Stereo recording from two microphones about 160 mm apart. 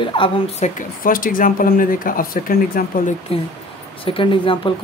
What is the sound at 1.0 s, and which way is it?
Speech, 60° left (ahead or behind).